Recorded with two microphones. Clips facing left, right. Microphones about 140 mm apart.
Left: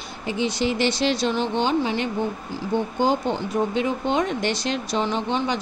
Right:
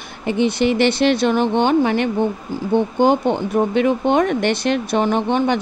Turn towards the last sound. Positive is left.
turn(degrees=-55)  # may be behind; listen again after turning